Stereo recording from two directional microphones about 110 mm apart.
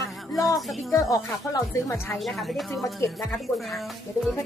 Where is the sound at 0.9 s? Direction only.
30° left (ahead or behind).